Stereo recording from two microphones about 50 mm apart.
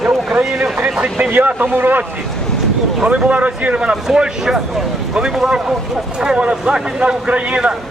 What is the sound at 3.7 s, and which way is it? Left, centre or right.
Speech, centre.